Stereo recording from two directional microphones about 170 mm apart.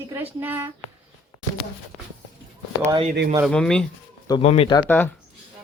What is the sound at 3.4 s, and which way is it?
Speech, 5° left (ahead or behind).